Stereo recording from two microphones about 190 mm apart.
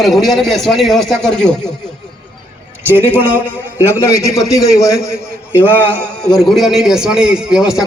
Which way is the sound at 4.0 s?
15° left (ahead or behind).